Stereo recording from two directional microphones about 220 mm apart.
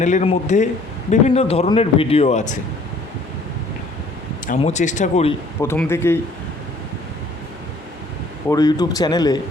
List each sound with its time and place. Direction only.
0.0 s a man's voice: 30° left (ahead or behind)
4.4 s speech: 30° left (ahead or behind)
5.5 s a man's voice: 10° left (ahead or behind)
8.4 s a man's voice: 15° left (ahead or behind)